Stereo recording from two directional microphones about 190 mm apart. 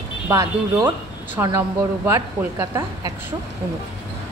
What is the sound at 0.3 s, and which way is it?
A woman's voice, 20° right (ahead or behind).